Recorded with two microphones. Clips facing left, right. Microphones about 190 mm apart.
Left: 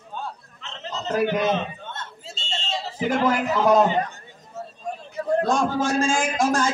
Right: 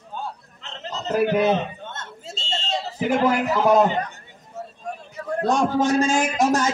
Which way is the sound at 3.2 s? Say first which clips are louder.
Even; 5° right (ahead or behind).